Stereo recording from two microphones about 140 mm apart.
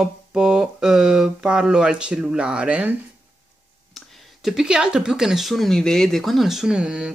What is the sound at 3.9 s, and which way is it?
Speech, centre (ahead or behind).